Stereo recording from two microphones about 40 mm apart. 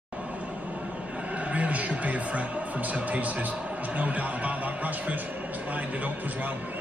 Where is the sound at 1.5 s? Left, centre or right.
Right.